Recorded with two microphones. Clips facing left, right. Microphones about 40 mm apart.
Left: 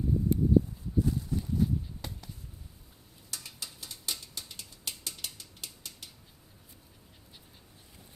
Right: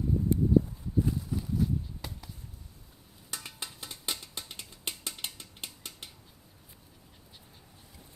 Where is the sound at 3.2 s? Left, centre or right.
Right.